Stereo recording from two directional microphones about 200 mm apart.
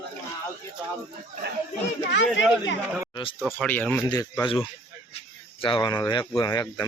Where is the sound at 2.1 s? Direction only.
60° left (ahead or behind).